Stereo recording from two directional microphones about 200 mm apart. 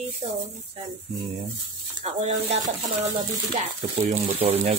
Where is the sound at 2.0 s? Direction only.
35° right (ahead or behind).